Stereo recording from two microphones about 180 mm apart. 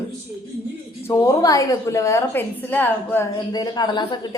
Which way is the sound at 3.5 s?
25° left (ahead or behind).